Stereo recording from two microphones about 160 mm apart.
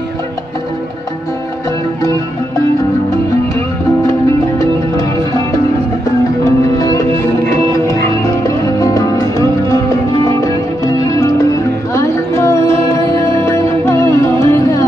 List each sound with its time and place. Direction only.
4.6 s music: 20° left (ahead or behind)
6.4 s music: 20° left (ahead or behind)
8.5 s music: 20° left (ahead or behind)
11.1 s music: 20° left (ahead or behind)